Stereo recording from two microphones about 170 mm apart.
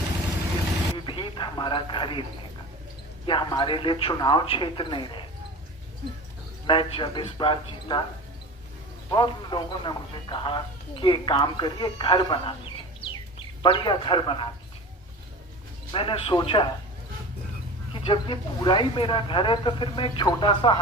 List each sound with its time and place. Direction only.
0.9 s a sound: 30° left (ahead or behind)
3.2 s speech: 30° left (ahead or behind)
6.7 s speech: 30° left (ahead or behind)
9.0 s speech: 25° left (ahead or behind)
15.9 s a man's voice: 30° left (ahead or behind)
17.9 s speech: 30° left (ahead or behind)